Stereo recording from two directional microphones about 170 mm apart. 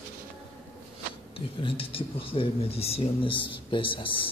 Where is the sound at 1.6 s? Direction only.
30° left (ahead or behind).